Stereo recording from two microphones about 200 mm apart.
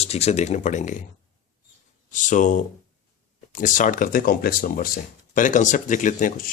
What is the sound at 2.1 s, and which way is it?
Speech, 40° left (ahead or behind).